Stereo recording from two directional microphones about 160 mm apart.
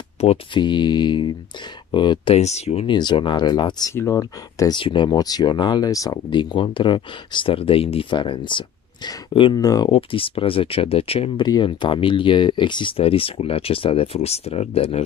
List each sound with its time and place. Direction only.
0.2 s speech: 35° left (ahead or behind)
3.0 s speech: 30° left (ahead or behind)
4.7 s speech: 30° left (ahead or behind)
9.8 s speech: 35° left (ahead or behind)
11.4 s speech: 25° left (ahead or behind)